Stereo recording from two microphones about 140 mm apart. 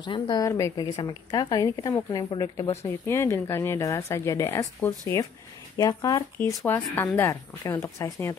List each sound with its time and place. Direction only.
0.0 s speech: 30° left (ahead or behind)
0.5 s speech: 20° left (ahead or behind)
5.8 s speech: 25° left (ahead or behind)
6.4 s speech: 15° left (ahead or behind)